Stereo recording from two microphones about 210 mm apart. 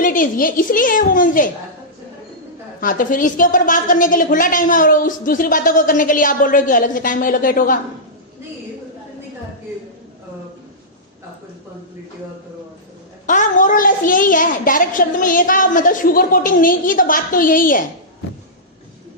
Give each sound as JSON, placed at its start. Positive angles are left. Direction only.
{"t": 0.0, "sound": "a woman's voice", "side_deg": 40}
{"t": 2.8, "sound": "a woman's voice", "side_deg": 40}
{"t": 13.2, "sound": "a woman's voice", "side_deg": 35}